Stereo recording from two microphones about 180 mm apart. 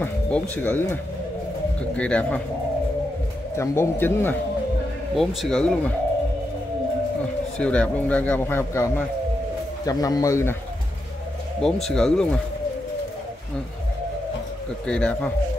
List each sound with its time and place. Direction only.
0.0 s speech: 10° left (ahead or behind)
2.0 s a man's voice: 5° left (ahead or behind)
3.5 s a man's voice: 15° left (ahead or behind)
5.1 s speech: centre (ahead or behind)
7.5 s a man's voice: 5° left (ahead or behind)
11.6 s speech: 5° left (ahead or behind)
14.9 s a man's voice: 10° left (ahead or behind)